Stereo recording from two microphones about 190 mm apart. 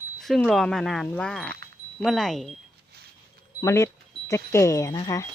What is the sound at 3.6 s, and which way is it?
Speech, 15° left (ahead or behind).